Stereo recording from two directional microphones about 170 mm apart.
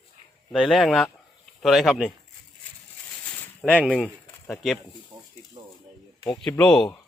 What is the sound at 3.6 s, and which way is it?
Speech, 5° right (ahead or behind).